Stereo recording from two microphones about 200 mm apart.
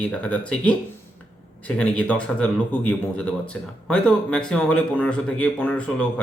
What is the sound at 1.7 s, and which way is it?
Speech, 5° left (ahead or behind).